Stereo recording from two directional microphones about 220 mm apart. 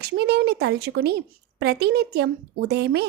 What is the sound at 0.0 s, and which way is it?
Speech, 45° right (ahead or behind).